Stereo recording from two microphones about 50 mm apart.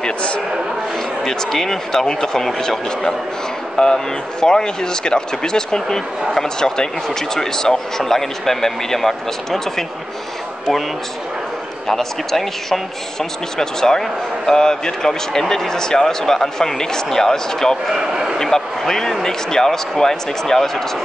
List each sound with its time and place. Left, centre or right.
0.0 s a sound: left
1.2 s speech: centre
11.9 s speech: centre
17.9 s a man's voice: centre
18.4 s speech: centre